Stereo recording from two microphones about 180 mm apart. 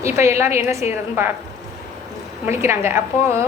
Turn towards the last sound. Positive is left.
turn(degrees=-15)  # may be behind; listen again after turning